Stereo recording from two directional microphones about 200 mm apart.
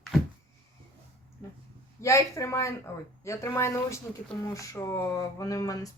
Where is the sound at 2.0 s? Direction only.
15° left (ahead or behind).